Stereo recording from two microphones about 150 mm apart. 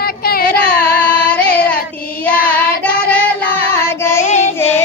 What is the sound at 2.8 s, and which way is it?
Child singing, 10° left (ahead or behind).